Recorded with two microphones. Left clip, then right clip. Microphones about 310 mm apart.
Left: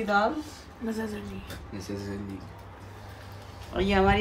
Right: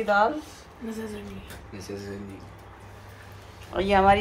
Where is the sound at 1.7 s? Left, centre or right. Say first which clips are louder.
Even; left.